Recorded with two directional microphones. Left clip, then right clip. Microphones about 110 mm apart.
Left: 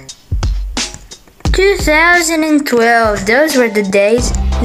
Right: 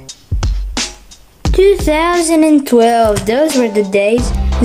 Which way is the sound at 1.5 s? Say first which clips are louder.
Right 2 dB; 20° right (ahead or behind).